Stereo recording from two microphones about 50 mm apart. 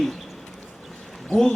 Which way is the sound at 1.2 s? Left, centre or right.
Centre.